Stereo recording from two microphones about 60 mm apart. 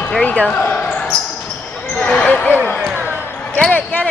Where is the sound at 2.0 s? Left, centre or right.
Left.